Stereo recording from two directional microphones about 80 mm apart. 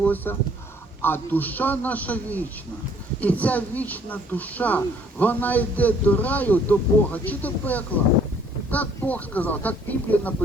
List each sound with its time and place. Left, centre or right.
0.0 s speech: left